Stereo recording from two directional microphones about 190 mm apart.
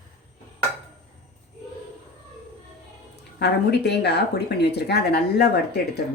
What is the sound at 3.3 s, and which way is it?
Speech, 60° left (ahead or behind).